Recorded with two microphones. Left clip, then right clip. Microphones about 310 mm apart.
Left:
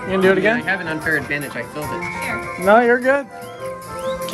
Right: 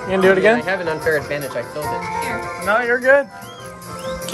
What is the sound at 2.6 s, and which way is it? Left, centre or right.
Speech, centre.